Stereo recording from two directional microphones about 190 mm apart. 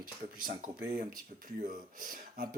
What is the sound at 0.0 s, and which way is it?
Speech, 50° right (ahead or behind).